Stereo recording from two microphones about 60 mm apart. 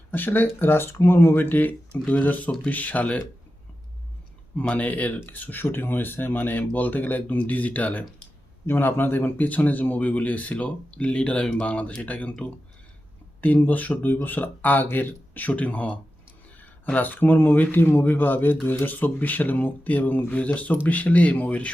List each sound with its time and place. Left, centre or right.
0.1 s speech: left
4.7 s speech: left
8.6 s speech: left